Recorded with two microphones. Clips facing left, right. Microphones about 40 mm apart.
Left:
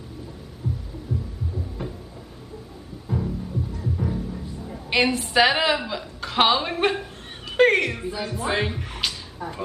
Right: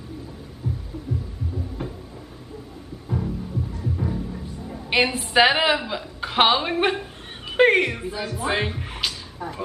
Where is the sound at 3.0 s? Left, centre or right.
Centre.